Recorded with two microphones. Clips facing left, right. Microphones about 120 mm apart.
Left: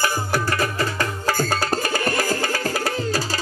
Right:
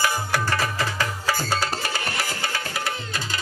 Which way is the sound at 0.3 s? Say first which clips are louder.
Left 2 dB; 45° left (ahead or behind).